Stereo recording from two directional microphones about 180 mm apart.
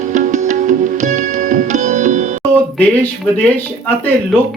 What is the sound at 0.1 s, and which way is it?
Music, 45° right (ahead or behind).